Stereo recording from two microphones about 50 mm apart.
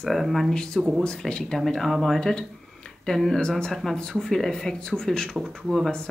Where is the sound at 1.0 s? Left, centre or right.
Centre.